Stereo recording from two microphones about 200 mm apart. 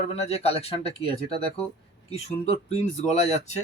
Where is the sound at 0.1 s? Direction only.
30° left (ahead or behind).